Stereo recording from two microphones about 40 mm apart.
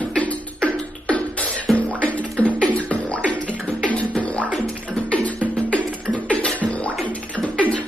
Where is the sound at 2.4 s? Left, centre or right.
Left.